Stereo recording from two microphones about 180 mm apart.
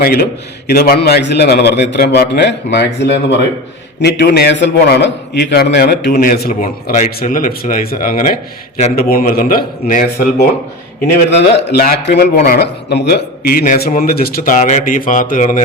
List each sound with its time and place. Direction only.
0.0 s a man's voice: 55° left (ahead or behind)
11.0 s a man's voice: 65° left (ahead or behind); by 15.6 s 45° left (ahead or behind)